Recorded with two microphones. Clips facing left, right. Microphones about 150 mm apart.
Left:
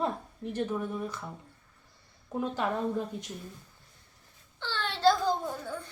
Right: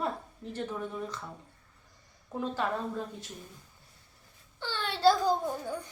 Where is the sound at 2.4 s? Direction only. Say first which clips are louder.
Even; 15° left (ahead or behind).